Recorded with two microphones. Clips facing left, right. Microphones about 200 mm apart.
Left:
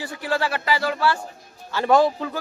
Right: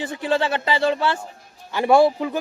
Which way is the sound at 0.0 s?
20° right (ahead or behind).